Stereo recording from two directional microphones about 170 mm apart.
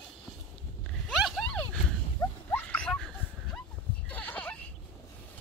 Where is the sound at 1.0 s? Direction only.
Centre (ahead or behind).